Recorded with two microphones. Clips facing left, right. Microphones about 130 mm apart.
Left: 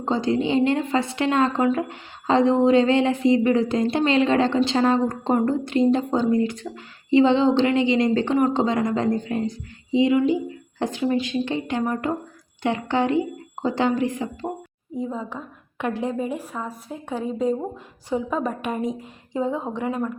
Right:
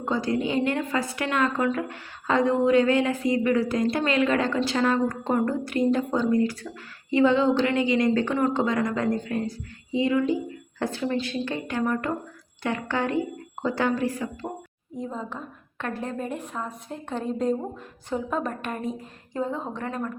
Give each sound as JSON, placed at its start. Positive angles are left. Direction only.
{"t": 0.0, "sound": "a woman's voice", "side_deg": 25}
{"t": 14.9, "sound": "a woman's voice", "side_deg": 5}